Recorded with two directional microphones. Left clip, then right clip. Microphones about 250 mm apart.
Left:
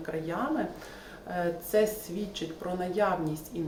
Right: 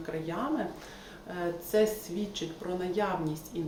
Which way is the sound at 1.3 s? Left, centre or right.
Centre.